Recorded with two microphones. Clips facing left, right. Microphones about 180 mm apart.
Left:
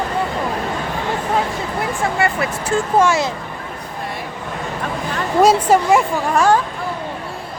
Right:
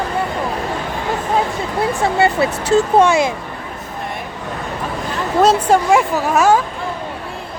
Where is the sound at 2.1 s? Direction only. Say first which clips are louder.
Right 4 dB; 25° right (ahead or behind).